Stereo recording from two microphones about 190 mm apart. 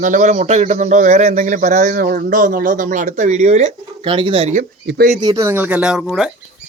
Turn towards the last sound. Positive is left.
turn(degrees=-5)  # may be behind; listen again after turning